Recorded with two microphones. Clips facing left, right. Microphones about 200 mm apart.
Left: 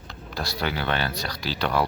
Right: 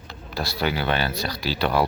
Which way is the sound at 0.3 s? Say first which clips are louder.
Right 3 dB; 5° right (ahead or behind).